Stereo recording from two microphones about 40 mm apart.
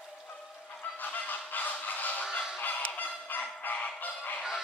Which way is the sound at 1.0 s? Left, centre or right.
Left.